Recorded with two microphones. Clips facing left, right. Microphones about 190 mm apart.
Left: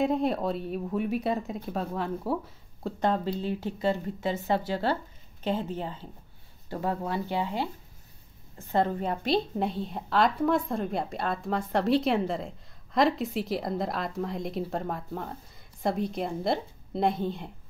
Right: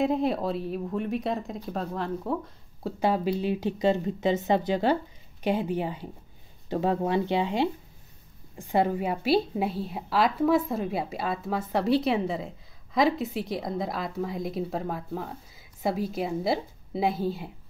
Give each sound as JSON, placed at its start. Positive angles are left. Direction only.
{"t": 0.0, "sound": "a woman's voice", "side_deg": 0}
{"t": 3.0, "sound": "a woman's voice", "side_deg": -10}